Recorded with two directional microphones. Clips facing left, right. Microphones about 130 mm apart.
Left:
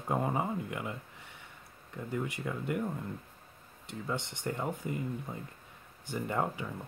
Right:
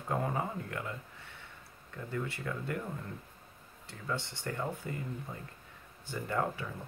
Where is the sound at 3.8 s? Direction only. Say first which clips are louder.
Left 2 dB; 20° left (ahead or behind).